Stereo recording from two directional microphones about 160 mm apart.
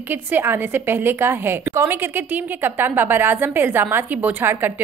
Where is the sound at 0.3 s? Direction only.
15° right (ahead or behind).